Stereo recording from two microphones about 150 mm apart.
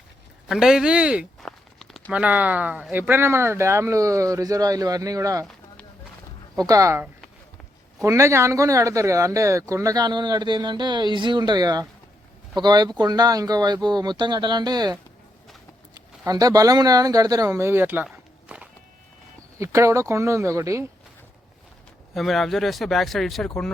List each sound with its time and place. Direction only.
0.4 s a sound: 5° right (ahead or behind)
2.2 s speech: 10° right (ahead or behind)
6.7 s speech: 20° right (ahead or behind)
16.0 s speech: 25° right (ahead or behind); by 18.7 s 5° right (ahead or behind)
19.5 s speech: 20° right (ahead or behind)
22.1 s speech: centre (ahead or behind)